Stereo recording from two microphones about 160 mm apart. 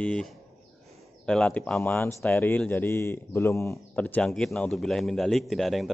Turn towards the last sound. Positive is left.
turn(degrees=0)  # may be behind; listen again after turning